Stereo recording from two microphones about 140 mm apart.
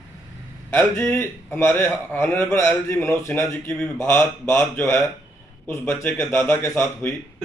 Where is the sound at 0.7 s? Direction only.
15° left (ahead or behind).